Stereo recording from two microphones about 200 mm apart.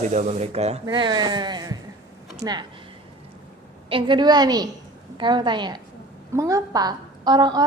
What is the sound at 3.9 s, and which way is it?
A woman's voice, 25° right (ahead or behind).